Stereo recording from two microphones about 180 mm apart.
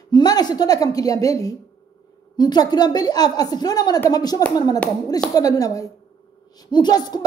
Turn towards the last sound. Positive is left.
turn(degrees=20)  # may be behind; listen again after turning